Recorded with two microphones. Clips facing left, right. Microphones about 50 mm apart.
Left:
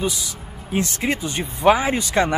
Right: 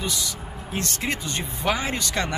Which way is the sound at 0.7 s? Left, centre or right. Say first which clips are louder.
Left 6 dB; centre.